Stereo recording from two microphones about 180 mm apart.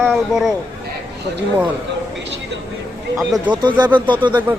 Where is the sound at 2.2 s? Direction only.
85° right.